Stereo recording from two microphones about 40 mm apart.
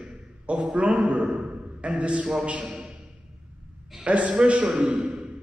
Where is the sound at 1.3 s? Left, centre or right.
Centre.